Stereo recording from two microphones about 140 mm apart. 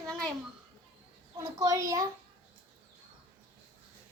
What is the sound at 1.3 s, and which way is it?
Speech, 25° right (ahead or behind).